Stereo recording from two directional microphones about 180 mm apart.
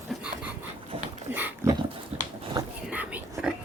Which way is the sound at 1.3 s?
10° right (ahead or behind).